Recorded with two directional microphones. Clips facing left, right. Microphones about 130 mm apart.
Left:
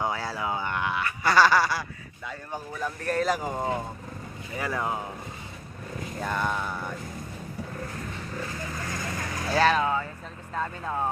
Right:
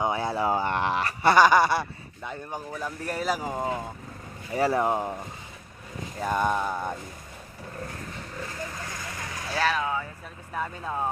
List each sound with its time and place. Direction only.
0.0 s a sound: 20° right (ahead or behind)
0.4 s a sound: 35° right (ahead or behind)
1.3 s speech: 20° right (ahead or behind)
4.5 s speech: 30° right (ahead or behind)
6.1 s speech: 10° right (ahead or behind)
9.5 s speech: 5° right (ahead or behind)
9.7 s speech: 20° left (ahead or behind)
10.5 s speech: 10° right (ahead or behind)